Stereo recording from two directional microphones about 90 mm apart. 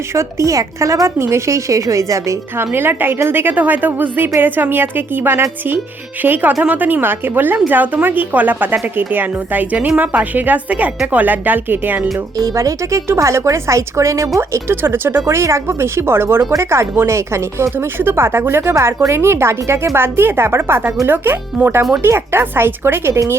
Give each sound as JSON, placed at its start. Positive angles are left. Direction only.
{"t": 0.1, "sound": "a woman's voice", "side_deg": -30}
{"t": 2.6, "sound": "speech", "side_deg": -25}
{"t": 12.1, "sound": "a woman's voice", "side_deg": -35}